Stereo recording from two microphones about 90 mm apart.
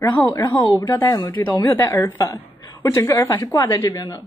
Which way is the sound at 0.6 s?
50° left (ahead or behind).